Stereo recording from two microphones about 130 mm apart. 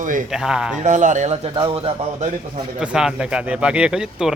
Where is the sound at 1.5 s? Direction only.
50° right (ahead or behind).